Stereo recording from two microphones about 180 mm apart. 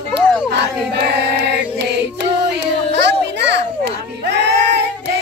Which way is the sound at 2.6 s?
75° right (ahead or behind).